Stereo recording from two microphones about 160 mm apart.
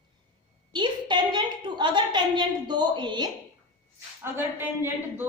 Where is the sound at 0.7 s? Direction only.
30° right (ahead or behind).